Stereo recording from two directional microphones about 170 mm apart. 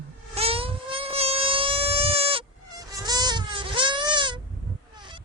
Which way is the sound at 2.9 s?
25° right (ahead or behind).